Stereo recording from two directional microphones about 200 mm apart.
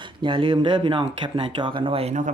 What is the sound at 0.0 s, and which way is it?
Speech, 25° right (ahead or behind).